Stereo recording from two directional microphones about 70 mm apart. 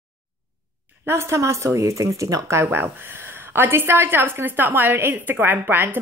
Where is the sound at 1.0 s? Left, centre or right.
Right.